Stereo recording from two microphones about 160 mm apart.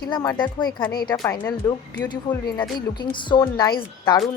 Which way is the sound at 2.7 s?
25° left (ahead or behind).